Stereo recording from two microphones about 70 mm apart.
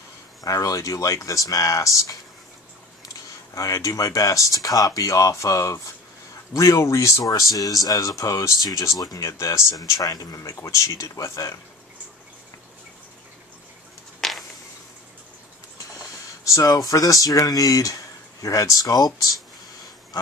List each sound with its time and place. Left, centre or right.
0.4 s speech: left
7.2 s speech: left
14.2 s a sound: centre
16.4 s speech: left